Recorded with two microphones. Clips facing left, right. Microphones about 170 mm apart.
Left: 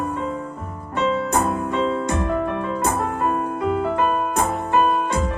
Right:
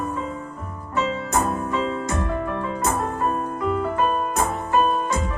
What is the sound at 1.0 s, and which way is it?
Music, 60° left (ahead or behind).